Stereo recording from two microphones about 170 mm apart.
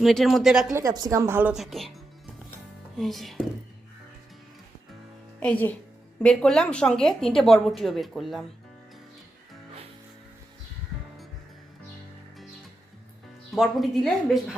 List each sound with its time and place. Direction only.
0.0 s a woman's voice: centre (ahead or behind)
0.7 s a woman's voice: 20° right (ahead or behind); by 1.9 s centre (ahead or behind)
3.0 s a woman's voice: centre (ahead or behind)
5.4 s a woman's voice: 10° left (ahead or behind)
13.6 s a woman's voice: centre (ahead or behind)